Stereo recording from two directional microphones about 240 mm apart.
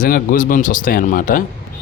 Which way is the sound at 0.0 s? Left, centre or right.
Left.